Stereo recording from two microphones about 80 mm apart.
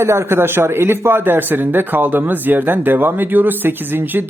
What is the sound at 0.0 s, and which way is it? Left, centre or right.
A man's voice, right.